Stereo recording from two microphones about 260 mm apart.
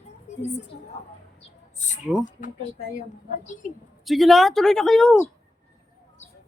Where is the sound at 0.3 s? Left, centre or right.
Left.